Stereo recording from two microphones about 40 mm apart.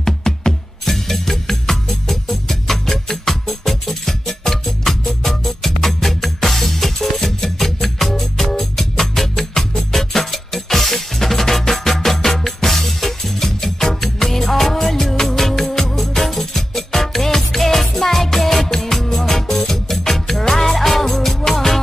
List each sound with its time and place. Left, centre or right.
0.0 s music: centre